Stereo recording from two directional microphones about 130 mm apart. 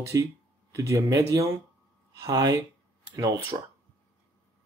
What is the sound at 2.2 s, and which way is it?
Speech, 30° right (ahead or behind).